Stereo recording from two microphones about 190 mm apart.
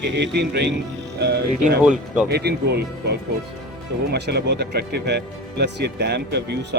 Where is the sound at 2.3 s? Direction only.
60° right (ahead or behind).